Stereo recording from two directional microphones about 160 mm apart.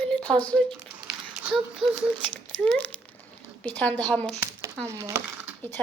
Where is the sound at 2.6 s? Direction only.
10° left (ahead or behind).